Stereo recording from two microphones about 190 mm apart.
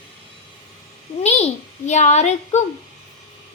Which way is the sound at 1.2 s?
35° left (ahead or behind).